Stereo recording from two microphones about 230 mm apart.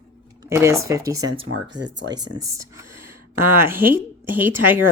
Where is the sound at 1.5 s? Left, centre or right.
Right.